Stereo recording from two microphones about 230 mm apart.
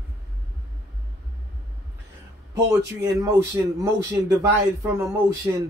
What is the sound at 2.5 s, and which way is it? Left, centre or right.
Speech, centre.